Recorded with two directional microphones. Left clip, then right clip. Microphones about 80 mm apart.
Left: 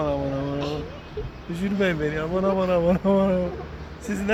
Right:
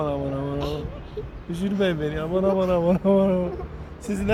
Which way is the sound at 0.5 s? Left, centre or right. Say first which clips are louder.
Even; right.